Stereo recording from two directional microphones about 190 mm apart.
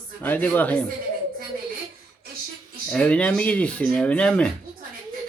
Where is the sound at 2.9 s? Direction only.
5° left (ahead or behind).